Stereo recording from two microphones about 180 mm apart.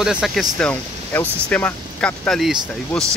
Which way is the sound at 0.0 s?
Centre (ahead or behind).